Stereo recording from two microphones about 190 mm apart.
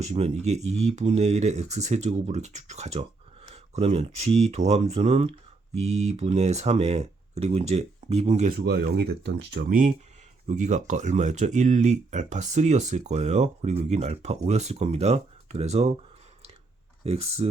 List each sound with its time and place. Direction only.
0.0 s speech: 35° right (ahead or behind)
8.5 s speech: 55° right (ahead or behind)
9.6 s speech: 45° right (ahead or behind)
17.0 s speech: 35° right (ahead or behind)